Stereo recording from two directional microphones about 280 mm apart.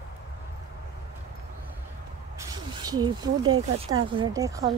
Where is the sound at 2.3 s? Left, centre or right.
Centre.